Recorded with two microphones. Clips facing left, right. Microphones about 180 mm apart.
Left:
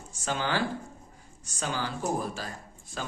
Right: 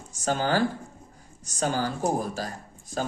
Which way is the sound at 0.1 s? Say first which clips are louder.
Right 5 dB; 40° right (ahead or behind).